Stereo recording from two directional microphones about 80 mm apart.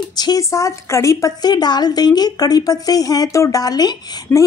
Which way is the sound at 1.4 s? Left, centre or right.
Left.